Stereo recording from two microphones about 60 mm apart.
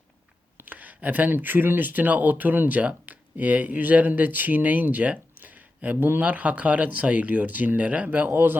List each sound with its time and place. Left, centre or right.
0.6 s speech: right